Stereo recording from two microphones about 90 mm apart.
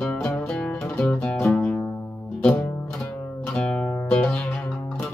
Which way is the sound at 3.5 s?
10° left (ahead or behind).